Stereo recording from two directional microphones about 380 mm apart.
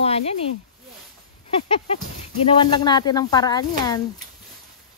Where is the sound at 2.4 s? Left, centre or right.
Centre.